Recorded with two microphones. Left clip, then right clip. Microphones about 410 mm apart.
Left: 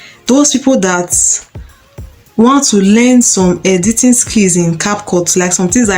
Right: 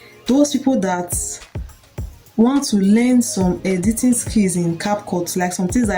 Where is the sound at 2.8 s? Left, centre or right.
Right.